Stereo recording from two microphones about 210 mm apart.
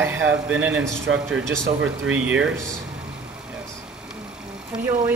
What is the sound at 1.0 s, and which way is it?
Speech, 65° right (ahead or behind).